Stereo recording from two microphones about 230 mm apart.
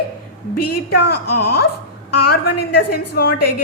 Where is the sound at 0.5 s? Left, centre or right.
Left.